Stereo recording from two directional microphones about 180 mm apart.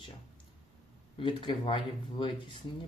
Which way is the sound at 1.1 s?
25° left (ahead or behind).